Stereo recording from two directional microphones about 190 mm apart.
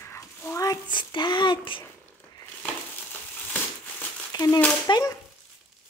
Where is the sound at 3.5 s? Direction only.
15° left (ahead or behind).